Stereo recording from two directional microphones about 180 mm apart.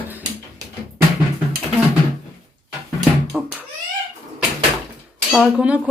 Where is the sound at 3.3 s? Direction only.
5° right (ahead or behind).